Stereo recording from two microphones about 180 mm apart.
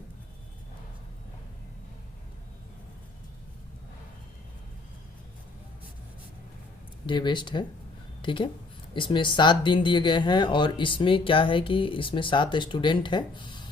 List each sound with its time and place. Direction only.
7.1 s speech: 25° left (ahead or behind)